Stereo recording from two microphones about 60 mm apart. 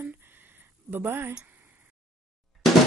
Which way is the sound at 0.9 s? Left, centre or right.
Right.